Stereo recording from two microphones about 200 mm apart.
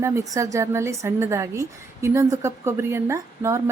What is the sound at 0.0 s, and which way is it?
A woman's voice, 15° right (ahead or behind).